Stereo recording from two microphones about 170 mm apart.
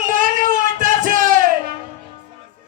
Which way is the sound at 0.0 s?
50° right (ahead or behind).